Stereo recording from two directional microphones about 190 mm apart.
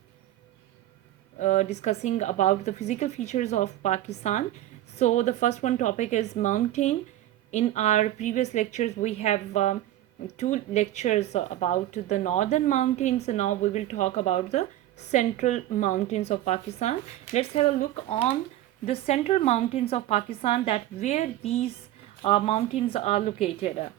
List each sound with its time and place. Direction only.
1.4 s speech: 40° left (ahead or behind)